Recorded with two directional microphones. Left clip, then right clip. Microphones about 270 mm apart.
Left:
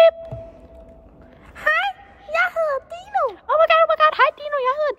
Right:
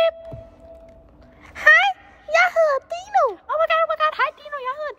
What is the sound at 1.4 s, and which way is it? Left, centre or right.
Gasp, right.